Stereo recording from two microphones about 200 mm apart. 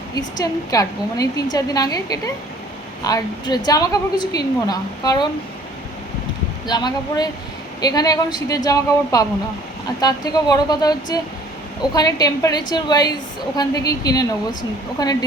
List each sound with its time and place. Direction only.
0.2 s a woman's voice: 20° left (ahead or behind)
6.7 s a woman's voice: 20° left (ahead or behind)